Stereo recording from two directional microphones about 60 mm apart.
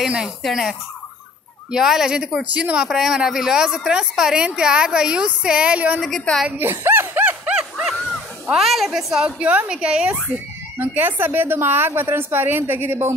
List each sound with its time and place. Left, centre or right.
0.4 s a woman's voice: centre; by 2.8 s right
2.8 s speech: centre
6.3 s a woman's voice: centre
6.6 s a sound: right
7.4 s a sound: right
7.8 s a sound: centre
8.5 s a woman's voice: centre
9.2 s a woman's voice: right
10.8 s a woman's voice: right